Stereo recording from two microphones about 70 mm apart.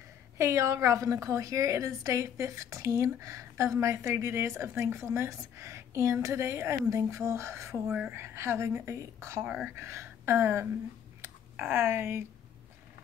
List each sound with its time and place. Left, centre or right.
0.4 s a woman's voice: right
7.9 s a woman's voice: right
8.2 s a woman's voice: right
11.1 s a sound: right
11.7 s a woman's voice: right